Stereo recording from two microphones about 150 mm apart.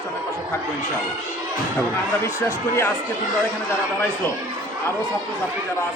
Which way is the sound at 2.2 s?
20° left (ahead or behind).